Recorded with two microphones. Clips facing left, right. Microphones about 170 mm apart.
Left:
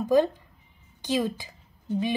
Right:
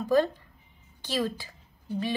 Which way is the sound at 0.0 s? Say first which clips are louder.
Left 2 dB; 15° left (ahead or behind).